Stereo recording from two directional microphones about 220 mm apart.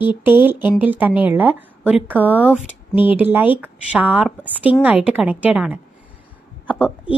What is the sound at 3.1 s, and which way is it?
A woman's voice, 10° right (ahead or behind).